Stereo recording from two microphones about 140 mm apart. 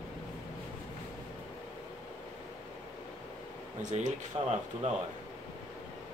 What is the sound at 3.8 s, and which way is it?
Speech, 60° right (ahead or behind).